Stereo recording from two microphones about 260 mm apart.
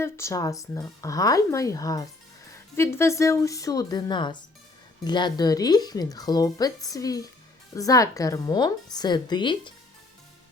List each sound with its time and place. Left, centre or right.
0.0 s speech: centre